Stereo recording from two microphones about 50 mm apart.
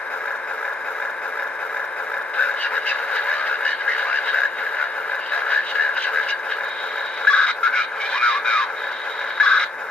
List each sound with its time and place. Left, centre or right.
2.3 s radio: left
7.2 s a sound: left
9.4 s radio: centre